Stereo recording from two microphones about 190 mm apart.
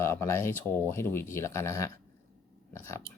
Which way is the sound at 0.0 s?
15° left (ahead or behind).